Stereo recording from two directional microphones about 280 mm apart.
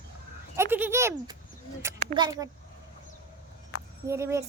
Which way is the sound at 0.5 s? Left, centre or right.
Centre.